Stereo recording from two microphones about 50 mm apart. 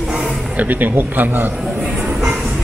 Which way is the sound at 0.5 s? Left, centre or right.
Right.